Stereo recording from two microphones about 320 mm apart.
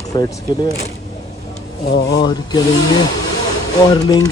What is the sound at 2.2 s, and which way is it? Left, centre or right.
Speech, centre.